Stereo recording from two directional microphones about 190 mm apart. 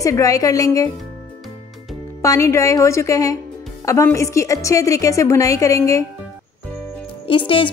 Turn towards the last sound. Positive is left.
turn(degrees=25)  # may be behind; listen again after turning